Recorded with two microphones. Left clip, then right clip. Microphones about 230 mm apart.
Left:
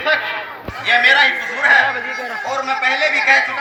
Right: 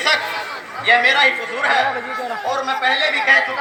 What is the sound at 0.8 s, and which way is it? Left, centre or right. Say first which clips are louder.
Speech: left 1 dB; right.